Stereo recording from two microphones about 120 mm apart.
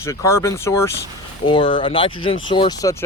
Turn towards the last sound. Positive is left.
turn(degrees=25)  # may be behind; listen again after turning